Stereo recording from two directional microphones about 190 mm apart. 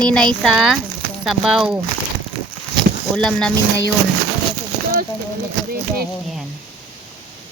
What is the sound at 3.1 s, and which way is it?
Speech, 5° left (ahead or behind).